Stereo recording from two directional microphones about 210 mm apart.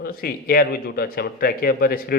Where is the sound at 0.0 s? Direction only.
45° left (ahead or behind).